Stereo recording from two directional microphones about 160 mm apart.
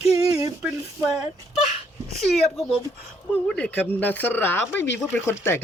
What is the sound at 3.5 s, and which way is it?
Speech, 5° left (ahead or behind).